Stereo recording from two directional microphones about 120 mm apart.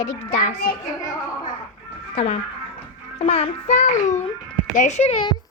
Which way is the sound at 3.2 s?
60° left (ahead or behind).